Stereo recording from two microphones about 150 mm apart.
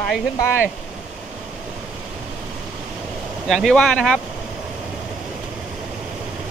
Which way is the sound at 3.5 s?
Centre (ahead or behind).